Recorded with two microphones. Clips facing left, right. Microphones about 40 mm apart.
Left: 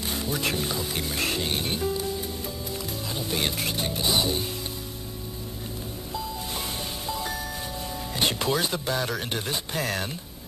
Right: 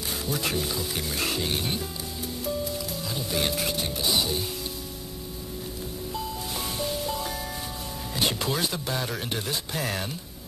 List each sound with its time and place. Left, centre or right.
0.3 s speech: centre
3.2 s speech: centre
6.8 s music: centre
8.3 s speech: centre